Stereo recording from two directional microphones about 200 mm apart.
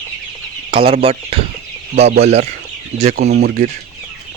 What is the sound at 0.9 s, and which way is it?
Speech, 30° right (ahead or behind).